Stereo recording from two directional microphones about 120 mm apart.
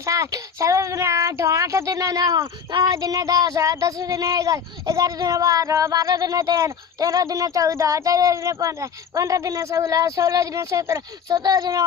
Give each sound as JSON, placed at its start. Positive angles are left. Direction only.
{"t": 0.0, "sound": "child singing", "side_deg": -25}